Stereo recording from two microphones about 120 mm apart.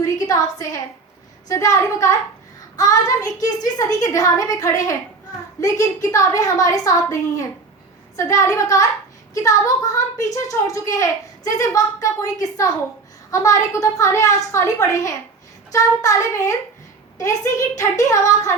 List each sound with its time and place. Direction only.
0.0 s a woman's voice: 30° left (ahead or behind)